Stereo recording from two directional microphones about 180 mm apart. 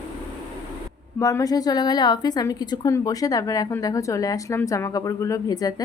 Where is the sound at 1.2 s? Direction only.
20° left (ahead or behind).